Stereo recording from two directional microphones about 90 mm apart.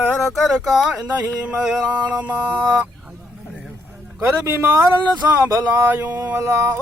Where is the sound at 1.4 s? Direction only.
10° right (ahead or behind).